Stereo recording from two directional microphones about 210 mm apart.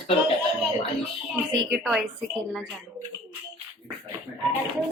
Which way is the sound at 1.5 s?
Centre (ahead or behind).